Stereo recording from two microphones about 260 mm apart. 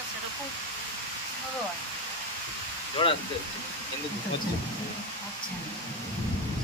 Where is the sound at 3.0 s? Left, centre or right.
Left.